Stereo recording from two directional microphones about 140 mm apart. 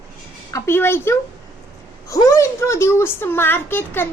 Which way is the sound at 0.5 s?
20° left (ahead or behind).